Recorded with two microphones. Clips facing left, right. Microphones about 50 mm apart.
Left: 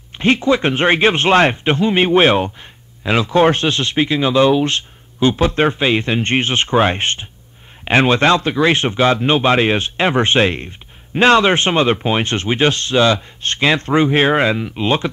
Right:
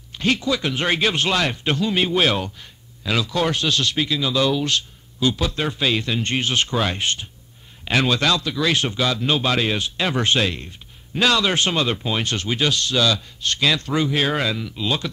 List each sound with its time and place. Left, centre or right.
0.2 s speech: left